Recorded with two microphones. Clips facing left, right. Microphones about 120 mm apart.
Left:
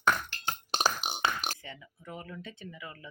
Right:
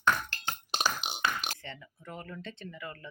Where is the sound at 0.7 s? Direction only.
40° left (ahead or behind).